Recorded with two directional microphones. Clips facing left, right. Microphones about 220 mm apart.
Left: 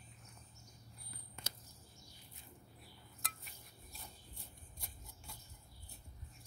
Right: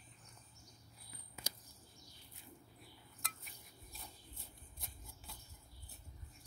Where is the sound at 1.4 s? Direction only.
10° right (ahead or behind).